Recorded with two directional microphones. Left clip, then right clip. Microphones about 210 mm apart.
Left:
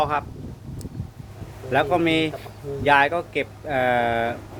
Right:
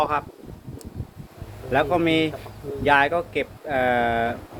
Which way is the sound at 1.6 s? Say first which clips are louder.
Even; 5° left (ahead or behind).